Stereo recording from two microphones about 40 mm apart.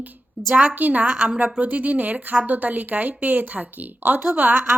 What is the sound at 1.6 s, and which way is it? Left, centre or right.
A woman's voice, right.